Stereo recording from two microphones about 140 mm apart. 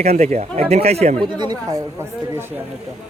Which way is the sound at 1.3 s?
30° right (ahead or behind).